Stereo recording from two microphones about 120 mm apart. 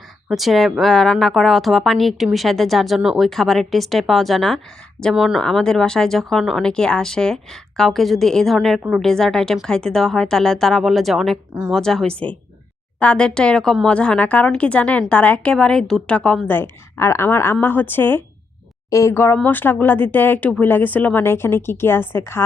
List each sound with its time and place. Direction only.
0.3 s a woman's voice: centre (ahead or behind); by 22.4 s 20° left (ahead or behind)